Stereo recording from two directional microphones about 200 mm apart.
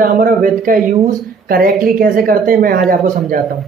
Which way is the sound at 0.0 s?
45° right (ahead or behind).